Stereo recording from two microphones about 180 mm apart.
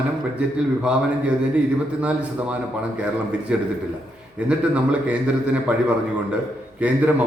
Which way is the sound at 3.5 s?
5° right (ahead or behind).